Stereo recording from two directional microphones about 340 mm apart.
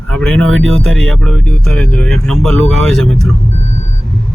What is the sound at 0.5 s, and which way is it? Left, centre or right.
Speech, right.